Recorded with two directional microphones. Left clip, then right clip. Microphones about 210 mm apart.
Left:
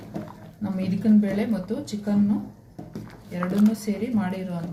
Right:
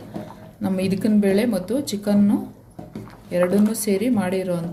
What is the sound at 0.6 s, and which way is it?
Speech, 50° right (ahead or behind).